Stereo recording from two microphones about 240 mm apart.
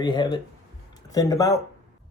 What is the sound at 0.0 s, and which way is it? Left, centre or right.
Speech, centre.